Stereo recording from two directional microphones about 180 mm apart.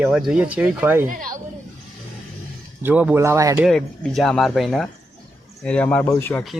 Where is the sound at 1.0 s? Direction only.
50° right (ahead or behind).